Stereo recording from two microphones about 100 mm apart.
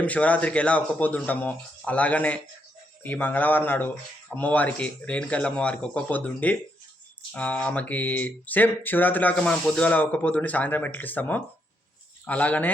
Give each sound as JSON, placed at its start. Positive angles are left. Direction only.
{"t": 0.0, "sound": "speech", "side_deg": 15}